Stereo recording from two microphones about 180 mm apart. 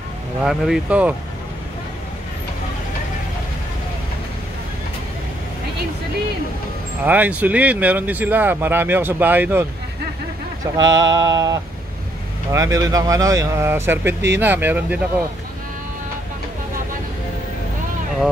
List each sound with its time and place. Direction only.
0.4 s speech: 5° right (ahead or behind)
7.1 s speech: 10° right (ahead or behind)
10.8 s mantra: 20° right (ahead or behind)
12.4 s speech: 15° right (ahead or behind)